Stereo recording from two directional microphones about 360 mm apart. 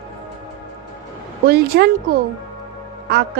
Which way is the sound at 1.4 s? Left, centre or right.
Right.